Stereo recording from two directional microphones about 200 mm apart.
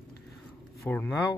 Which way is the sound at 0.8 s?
10° left (ahead or behind).